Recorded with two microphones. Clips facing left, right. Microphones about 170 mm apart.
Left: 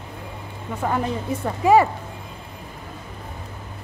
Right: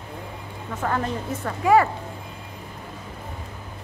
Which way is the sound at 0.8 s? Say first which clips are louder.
Left 2 dB; 15° left (ahead or behind).